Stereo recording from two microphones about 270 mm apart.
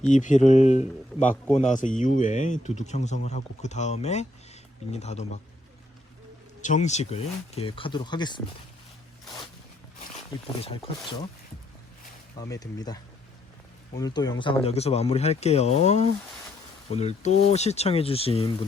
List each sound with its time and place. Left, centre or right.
0.1 s speech: left
6.6 s speech: left
10.6 s speech: left
12.4 s speech: centre